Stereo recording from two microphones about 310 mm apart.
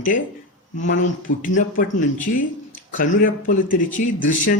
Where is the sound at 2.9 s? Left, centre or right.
Left.